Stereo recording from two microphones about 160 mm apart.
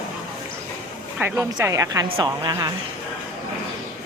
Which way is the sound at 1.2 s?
20° right (ahead or behind).